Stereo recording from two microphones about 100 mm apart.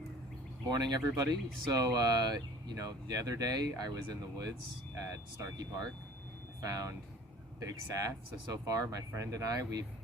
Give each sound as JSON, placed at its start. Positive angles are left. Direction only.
{"t": 0.7, "sound": "speech", "side_deg": -45}